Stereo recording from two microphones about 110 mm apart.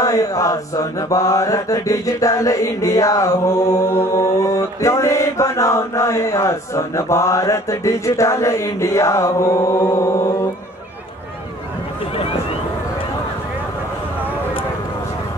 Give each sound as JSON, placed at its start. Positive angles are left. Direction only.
{"t": 0.0, "sound": "mantra", "side_deg": 30}